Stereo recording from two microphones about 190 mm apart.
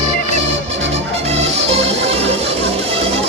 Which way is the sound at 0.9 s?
35° right (ahead or behind).